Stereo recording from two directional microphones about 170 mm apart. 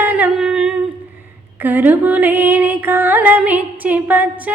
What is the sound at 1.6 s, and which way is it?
Music, 10° right (ahead or behind).